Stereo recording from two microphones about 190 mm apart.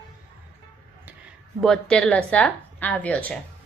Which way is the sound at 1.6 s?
5° left (ahead or behind).